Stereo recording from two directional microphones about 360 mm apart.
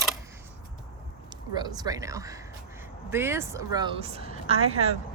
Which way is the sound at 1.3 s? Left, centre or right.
Centre.